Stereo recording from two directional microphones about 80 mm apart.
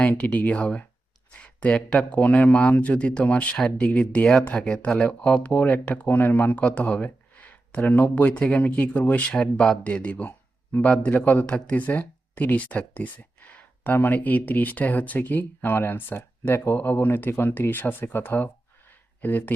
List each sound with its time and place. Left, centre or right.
0.0 s speech: centre